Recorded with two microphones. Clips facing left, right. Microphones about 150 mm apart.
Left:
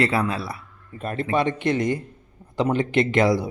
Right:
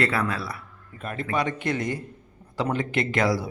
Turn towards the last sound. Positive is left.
turn(degrees=20)  # may be behind; listen again after turning